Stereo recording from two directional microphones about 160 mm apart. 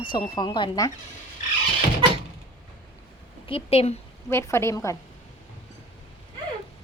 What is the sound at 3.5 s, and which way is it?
Speech, 35° left (ahead or behind).